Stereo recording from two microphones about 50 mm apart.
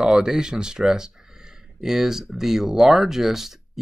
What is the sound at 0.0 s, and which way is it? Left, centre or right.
Speech, centre.